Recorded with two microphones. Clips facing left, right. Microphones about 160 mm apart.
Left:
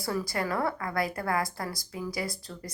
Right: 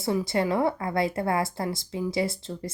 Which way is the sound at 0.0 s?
20° right (ahead or behind).